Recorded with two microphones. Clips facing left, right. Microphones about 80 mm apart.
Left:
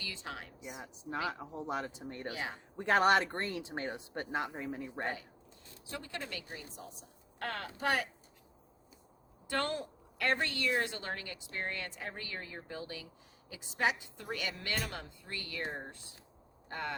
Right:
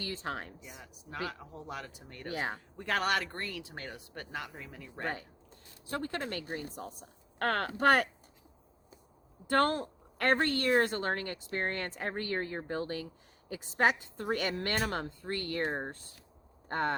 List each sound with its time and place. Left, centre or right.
0.0 s speech: right
0.8 s speech: left
2.3 s speech: right
2.7 s speech: left
5.9 s a woman's voice: right
9.5 s a woman's voice: right